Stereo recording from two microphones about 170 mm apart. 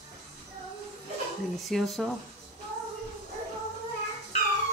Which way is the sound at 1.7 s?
Centre (ahead or behind).